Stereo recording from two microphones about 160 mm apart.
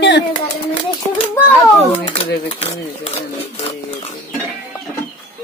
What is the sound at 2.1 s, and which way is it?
Speech, 40° left (ahead or behind).